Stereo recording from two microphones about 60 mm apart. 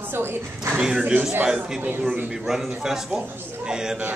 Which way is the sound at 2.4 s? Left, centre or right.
Centre.